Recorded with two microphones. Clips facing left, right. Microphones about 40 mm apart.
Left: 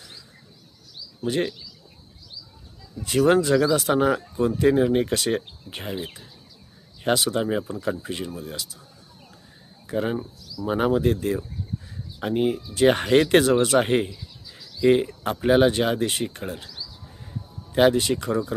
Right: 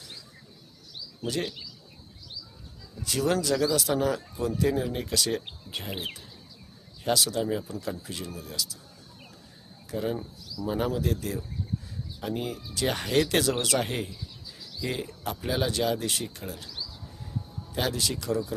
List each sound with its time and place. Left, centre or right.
1.2 s speech: left
3.0 s speech: left
7.0 s speech: left
9.8 s speech: left
17.7 s speech: left